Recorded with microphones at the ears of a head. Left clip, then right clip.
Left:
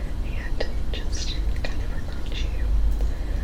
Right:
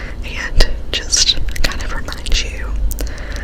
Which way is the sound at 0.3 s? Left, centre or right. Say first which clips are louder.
Right 13 dB; right.